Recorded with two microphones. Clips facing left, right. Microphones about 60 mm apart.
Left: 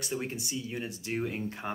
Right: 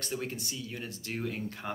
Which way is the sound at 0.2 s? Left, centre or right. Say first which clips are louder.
Left 2 dB; left.